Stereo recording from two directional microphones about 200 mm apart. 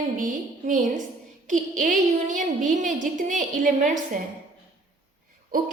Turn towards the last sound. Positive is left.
turn(degrees=-45)  # may be behind; listen again after turning